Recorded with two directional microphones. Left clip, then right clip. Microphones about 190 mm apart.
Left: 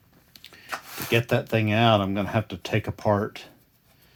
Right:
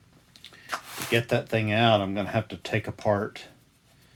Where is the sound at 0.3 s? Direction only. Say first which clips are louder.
Left 1 dB; 50° left (ahead or behind).